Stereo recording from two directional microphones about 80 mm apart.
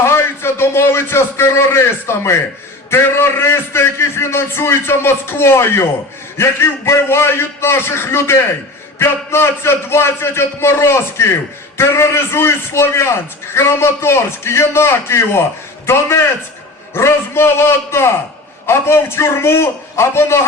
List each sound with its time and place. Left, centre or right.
0.0 s a man's voice: left